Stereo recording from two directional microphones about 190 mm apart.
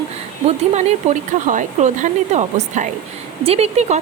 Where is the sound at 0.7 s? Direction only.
35° right (ahead or behind).